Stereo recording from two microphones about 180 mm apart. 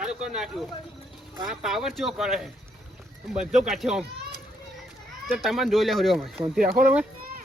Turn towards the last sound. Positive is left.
turn(degrees=-50)  # may be behind; listen again after turning